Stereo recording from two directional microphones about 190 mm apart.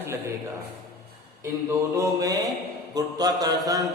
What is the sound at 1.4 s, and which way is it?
A man's voice, 15° right (ahead or behind).